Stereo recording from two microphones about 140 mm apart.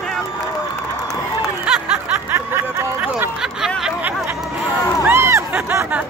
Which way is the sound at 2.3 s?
15° right (ahead or behind).